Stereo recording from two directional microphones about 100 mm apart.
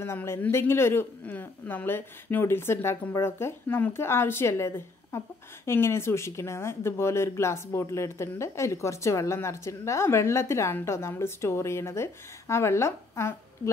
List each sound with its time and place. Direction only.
0.0 s speech: 25° left (ahead or behind)